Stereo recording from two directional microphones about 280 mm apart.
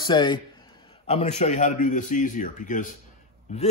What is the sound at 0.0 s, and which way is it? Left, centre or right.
A man's voice, centre.